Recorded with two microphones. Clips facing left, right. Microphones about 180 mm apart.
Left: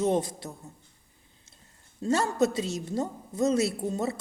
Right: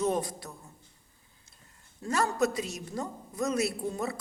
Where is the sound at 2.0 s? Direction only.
25° left (ahead or behind).